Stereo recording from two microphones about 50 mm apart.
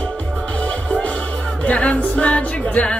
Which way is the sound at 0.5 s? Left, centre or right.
Left.